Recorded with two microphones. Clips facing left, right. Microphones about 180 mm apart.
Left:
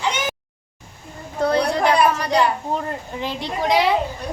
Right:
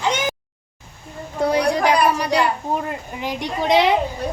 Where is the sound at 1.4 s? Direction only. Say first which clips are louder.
Right 1 dB; 10° right (ahead or behind).